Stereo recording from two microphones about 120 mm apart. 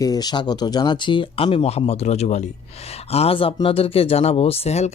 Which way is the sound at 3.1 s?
55° left (ahead or behind).